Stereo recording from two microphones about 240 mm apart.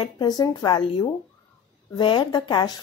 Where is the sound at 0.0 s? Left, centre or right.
Centre.